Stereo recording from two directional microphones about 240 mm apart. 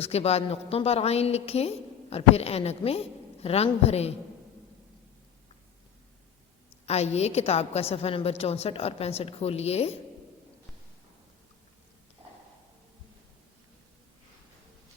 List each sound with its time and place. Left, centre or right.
0.0 s a woman's voice: left
6.8 s a woman's voice: left